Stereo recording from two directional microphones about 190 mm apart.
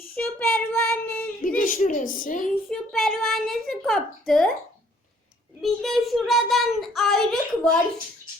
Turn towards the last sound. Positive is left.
turn(degrees=5)  # may be behind; listen again after turning